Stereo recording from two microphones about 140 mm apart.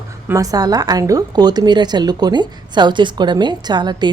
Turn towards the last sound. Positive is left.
turn(degrees=-30)  # may be behind; listen again after turning